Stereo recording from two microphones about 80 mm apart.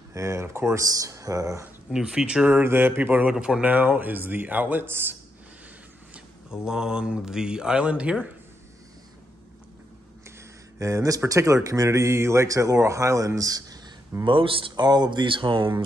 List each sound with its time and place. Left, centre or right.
0.1 s speech: right
0.8 s speech: right
1.9 s speech: centre
2.6 s speech: right
6.1 s speech: centre
10.8 s speech: right
14.2 s speech: right